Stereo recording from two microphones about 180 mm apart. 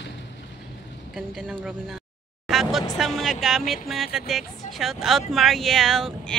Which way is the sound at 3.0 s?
Centre (ahead or behind).